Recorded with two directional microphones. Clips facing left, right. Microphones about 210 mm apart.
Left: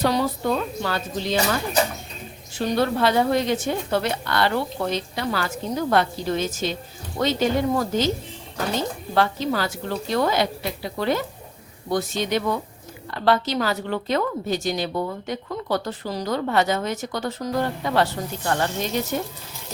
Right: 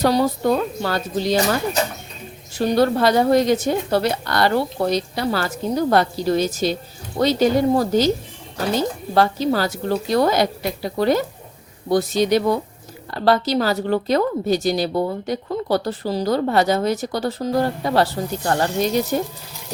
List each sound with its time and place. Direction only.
0.0 s a woman's voice: 40° right (ahead or behind)
2.6 s a woman's voice: 40° right (ahead or behind)
9.1 s a woman's voice: 35° right (ahead or behind)